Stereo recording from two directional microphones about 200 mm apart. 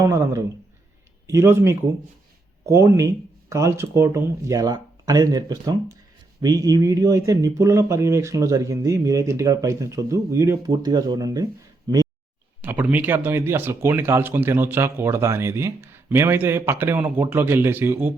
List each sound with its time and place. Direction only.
0.0 s speech: 15° right (ahead or behind)